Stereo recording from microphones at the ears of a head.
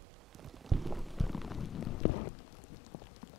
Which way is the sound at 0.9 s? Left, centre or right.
Centre.